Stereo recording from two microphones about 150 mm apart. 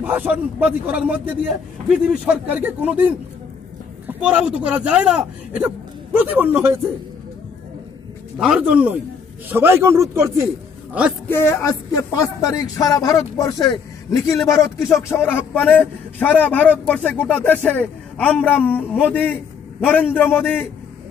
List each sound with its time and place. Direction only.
0.0 s a man's voice: 10° right (ahead or behind)
4.2 s a man's voice: 5° right (ahead or behind)
8.4 s a man's voice: 5° right (ahead or behind)
11.2 s a man's voice: 15° left (ahead or behind)